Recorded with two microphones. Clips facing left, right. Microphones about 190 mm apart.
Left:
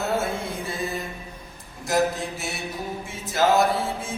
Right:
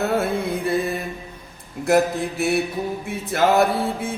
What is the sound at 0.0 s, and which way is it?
Mantra, 60° right (ahead or behind).